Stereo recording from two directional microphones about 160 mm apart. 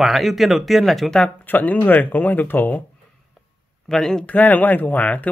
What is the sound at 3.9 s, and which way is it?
Speech, 5° left (ahead or behind).